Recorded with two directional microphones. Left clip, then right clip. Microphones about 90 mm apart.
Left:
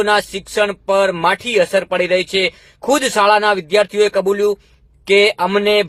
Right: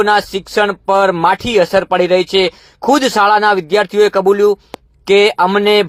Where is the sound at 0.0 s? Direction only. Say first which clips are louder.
Right 3 dB; 35° right (ahead or behind).